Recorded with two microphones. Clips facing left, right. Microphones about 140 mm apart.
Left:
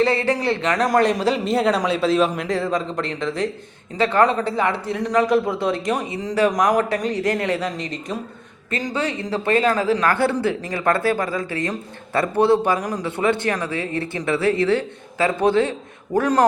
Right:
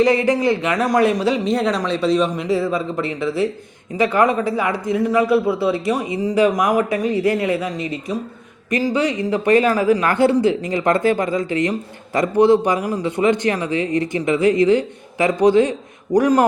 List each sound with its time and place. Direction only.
0.0 s speech: 15° right (ahead or behind)